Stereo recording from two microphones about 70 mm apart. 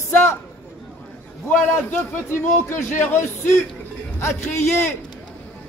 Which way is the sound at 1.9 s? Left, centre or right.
Left.